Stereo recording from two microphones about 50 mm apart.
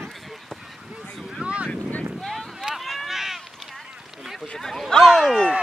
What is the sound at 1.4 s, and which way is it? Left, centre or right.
Boat, right.